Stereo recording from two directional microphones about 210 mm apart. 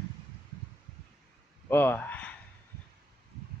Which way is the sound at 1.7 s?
10° left (ahead or behind).